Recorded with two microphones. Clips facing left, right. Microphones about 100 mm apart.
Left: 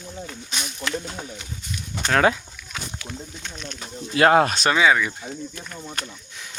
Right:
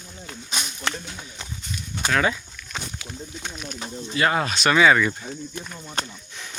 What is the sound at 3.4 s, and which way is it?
Speech, 10° right (ahead or behind).